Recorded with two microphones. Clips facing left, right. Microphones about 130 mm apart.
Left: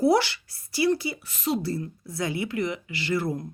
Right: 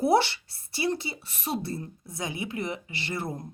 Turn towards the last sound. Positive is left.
turn(degrees=-25)  # may be behind; listen again after turning